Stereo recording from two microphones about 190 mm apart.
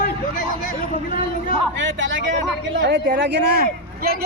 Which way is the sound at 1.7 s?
75° right (ahead or behind).